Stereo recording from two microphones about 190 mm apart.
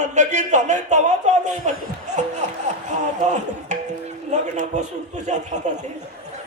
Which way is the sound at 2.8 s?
40° right (ahead or behind).